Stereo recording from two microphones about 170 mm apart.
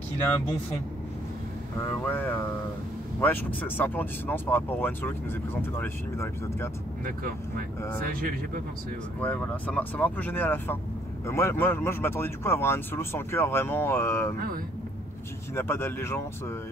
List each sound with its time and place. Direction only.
2.0 s speech: 10° left (ahead or behind)
8.0 s speech: 60° right (ahead or behind)
9.2 s speech: 10° left (ahead or behind)
15.5 s speech: 15° left (ahead or behind)